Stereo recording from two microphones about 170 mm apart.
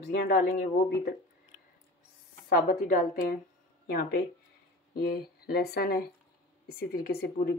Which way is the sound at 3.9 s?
65° left (ahead or behind).